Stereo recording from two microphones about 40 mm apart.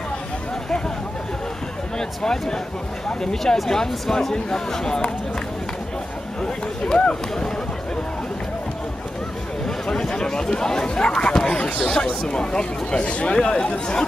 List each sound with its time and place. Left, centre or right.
2.0 s speech: centre
6.4 s speech: left
9.8 s speech: centre